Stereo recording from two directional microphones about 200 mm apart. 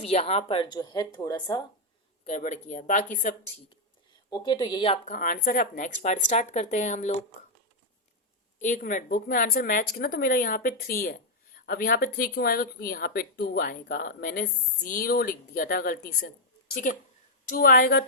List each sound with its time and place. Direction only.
0.0 s speech: 30° left (ahead or behind)
2.2 s speech: 35° left (ahead or behind)
4.3 s speech: 25° left (ahead or behind)
5.1 s speech: 40° left (ahead or behind)
8.5 s speech: 40° left (ahead or behind)